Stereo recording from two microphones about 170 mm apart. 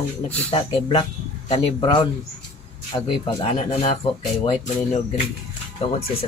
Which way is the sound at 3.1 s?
30° left (ahead or behind).